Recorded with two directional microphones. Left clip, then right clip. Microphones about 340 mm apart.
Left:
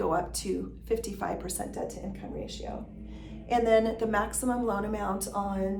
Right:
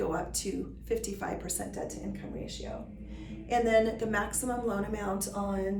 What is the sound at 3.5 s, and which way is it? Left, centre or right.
A woman's voice, centre.